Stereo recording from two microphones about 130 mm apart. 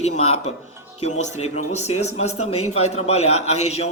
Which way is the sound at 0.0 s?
60° left (ahead or behind).